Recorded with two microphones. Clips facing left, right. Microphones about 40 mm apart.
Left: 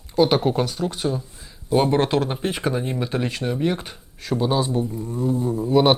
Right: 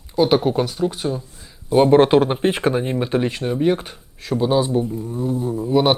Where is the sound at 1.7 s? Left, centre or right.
Centre; by 2.8 s right.